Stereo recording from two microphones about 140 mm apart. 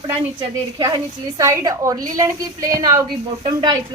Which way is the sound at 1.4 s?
25° right (ahead or behind).